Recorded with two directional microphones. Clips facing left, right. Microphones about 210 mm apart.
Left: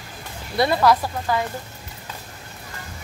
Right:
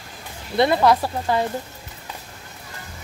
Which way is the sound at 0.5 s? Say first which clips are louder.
Right 1 dB; 20° right (ahead or behind).